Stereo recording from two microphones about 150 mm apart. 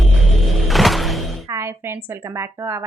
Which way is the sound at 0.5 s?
Centre (ahead or behind).